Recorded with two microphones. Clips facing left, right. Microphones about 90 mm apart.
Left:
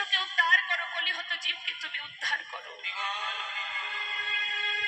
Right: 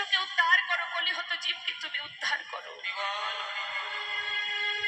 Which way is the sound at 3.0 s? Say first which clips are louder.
Even; 15° right (ahead or behind).